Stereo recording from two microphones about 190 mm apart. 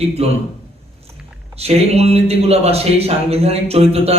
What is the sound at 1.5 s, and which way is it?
A man's voice, 35° right (ahead or behind).